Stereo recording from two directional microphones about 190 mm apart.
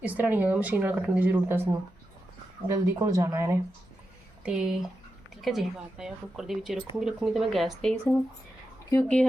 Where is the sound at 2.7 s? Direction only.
15° right (ahead or behind).